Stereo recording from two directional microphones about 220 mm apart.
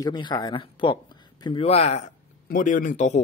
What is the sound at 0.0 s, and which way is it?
A man's voice, 20° left (ahead or behind).